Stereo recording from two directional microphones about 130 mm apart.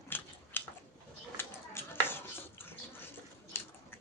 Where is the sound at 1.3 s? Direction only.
15° left (ahead or behind).